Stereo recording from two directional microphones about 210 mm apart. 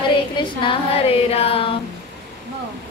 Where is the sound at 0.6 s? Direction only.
30° left (ahead or behind).